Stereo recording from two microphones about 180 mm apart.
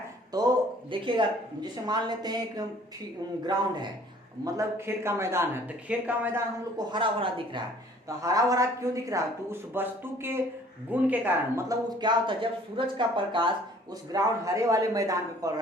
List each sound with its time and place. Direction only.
0.3 s a sound: 25° right (ahead or behind)
1.6 s speech: 25° right (ahead or behind)
4.4 s speech: 15° right (ahead or behind)
6.9 s speech: 30° right (ahead or behind)